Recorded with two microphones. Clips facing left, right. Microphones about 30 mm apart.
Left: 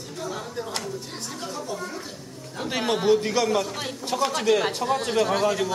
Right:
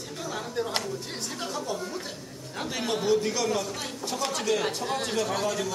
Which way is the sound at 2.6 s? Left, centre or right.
Left.